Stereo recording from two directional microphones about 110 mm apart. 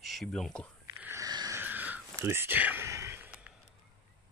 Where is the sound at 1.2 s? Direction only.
35° right (ahead or behind).